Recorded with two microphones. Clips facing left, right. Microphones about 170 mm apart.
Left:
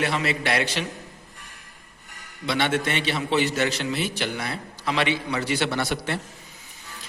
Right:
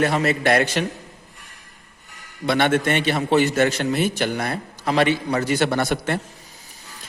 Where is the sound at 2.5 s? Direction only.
50° right (ahead or behind).